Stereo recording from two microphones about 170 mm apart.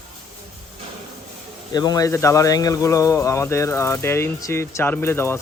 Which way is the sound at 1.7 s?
20° left (ahead or behind).